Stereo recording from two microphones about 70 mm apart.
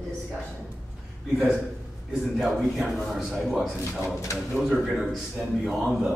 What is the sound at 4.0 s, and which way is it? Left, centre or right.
Speech, left.